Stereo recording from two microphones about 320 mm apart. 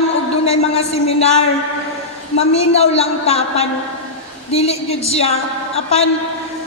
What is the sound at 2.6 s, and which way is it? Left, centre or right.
A woman's voice, centre.